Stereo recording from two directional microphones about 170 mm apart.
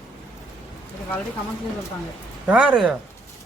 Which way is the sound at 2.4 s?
5° right (ahead or behind).